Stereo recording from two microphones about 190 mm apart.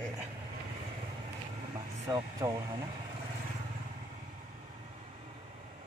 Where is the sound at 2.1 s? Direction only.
15° right (ahead or behind).